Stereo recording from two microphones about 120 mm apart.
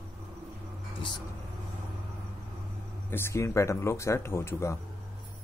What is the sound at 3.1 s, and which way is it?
Speech, 20° left (ahead or behind).